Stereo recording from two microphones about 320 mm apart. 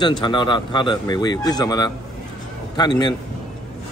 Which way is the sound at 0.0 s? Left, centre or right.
Centre.